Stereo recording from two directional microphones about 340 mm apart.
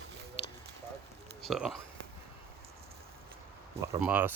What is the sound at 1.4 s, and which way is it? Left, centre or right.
Speech, centre.